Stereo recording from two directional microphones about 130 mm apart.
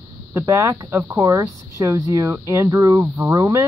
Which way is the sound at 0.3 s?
25° right (ahead or behind).